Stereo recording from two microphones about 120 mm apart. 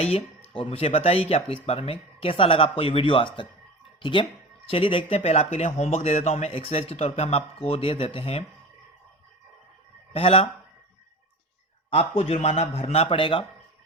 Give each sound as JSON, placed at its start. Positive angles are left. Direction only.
{"t": 0.0, "sound": "speech", "side_deg": 50}
{"t": 6.5, "sound": "speech", "side_deg": 55}
{"t": 10.2, "sound": "speech", "side_deg": 55}
{"t": 11.9, "sound": "speech", "side_deg": 50}